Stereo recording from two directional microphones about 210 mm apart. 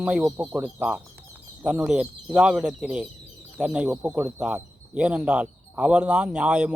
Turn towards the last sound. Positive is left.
turn(degrees=-5)  # may be behind; listen again after turning